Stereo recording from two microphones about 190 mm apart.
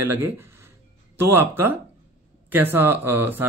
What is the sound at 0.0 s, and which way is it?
Speech, 10° right (ahead or behind).